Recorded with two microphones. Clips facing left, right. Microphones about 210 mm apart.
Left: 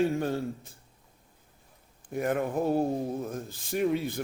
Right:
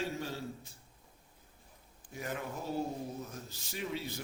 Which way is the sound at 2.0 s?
55° left (ahead or behind).